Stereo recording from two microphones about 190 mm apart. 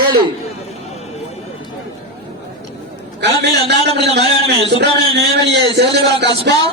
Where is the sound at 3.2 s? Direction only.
60° right (ahead or behind).